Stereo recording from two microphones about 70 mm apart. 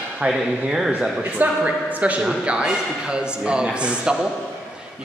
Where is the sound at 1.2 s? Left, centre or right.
Right.